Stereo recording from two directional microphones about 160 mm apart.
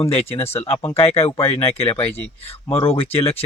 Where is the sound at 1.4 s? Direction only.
15° left (ahead or behind).